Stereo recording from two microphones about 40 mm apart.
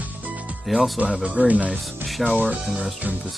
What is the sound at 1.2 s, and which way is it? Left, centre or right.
Speech, right.